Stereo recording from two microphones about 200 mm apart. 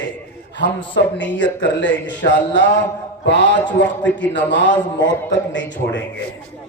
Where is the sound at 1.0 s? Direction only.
60° left (ahead or behind).